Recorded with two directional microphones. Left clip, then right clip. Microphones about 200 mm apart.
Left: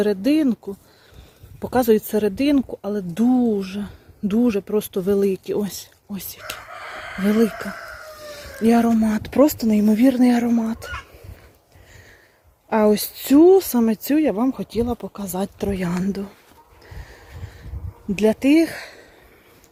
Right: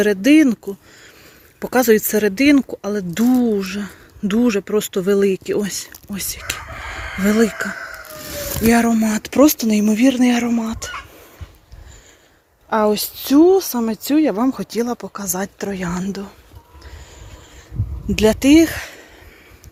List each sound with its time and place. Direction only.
0.0 s speech: centre (ahead or behind)
12.7 s a woman's voice: 25° left (ahead or behind)
18.1 s speech: centre (ahead or behind)